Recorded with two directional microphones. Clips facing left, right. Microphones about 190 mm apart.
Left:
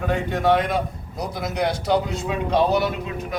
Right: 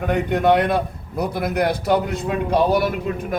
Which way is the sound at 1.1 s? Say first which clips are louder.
Right 6 dB; 60° right (ahead or behind).